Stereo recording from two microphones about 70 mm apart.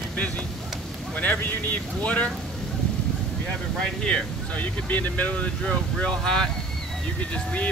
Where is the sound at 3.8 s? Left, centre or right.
Centre.